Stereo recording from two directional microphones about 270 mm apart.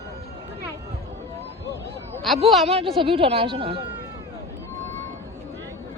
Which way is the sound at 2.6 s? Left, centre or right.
Right.